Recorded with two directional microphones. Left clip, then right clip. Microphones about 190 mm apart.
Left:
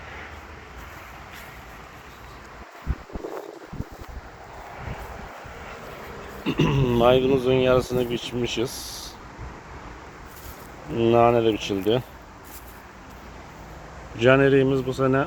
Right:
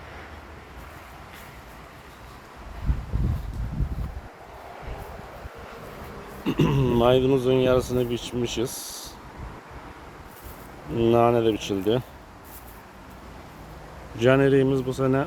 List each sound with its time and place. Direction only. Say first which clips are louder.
6.4 s speech: left 1 dB; 15° right (ahead or behind)
8.8 s a sound: left 2 dB; 25° left (ahead or behind)
10.9 s speech: left 2 dB; 10° right (ahead or behind)
14.2 s speech: left 2 dB; 10° right (ahead or behind)